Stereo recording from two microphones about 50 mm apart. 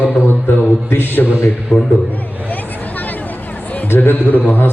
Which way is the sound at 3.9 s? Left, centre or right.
Left.